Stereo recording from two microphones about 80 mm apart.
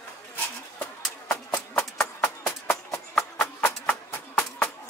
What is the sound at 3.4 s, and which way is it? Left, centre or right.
Music, left.